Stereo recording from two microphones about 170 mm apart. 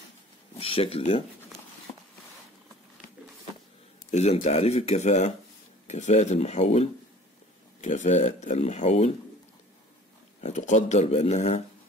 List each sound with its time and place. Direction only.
0.6 s speech: 35° left (ahead or behind)
4.1 s speech: 40° left (ahead or behind)
10.4 s speech: 45° left (ahead or behind)